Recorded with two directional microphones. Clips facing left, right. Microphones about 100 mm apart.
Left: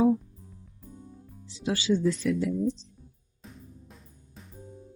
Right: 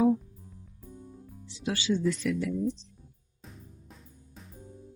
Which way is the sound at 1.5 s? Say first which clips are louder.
Left 3 dB; 30° left (ahead or behind).